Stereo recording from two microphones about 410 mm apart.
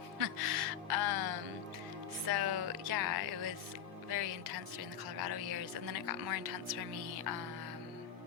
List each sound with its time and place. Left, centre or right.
0.2 s music: right
4.1 s a woman's voice: right